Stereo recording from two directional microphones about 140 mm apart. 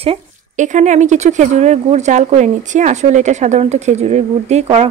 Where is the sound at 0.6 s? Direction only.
60° right (ahead or behind).